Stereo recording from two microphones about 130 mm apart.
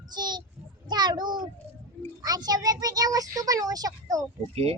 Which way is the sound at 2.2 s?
30° right (ahead or behind).